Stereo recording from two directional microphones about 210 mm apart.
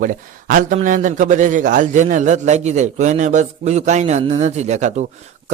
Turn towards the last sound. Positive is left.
turn(degrees=-35)  # may be behind; listen again after turning